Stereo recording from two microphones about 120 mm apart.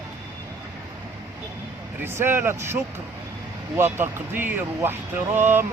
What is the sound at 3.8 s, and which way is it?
Speech, 20° right (ahead or behind).